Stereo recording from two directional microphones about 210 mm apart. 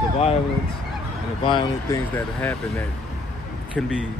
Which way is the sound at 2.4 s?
5° left (ahead or behind).